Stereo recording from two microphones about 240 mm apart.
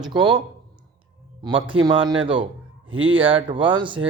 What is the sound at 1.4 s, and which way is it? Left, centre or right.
Speech, centre.